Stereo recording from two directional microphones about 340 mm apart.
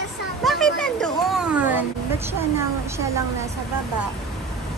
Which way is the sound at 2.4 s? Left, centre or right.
Centre.